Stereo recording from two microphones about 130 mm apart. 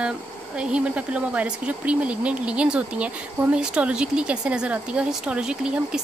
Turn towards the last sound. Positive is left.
turn(degrees=-5)  # may be behind; listen again after turning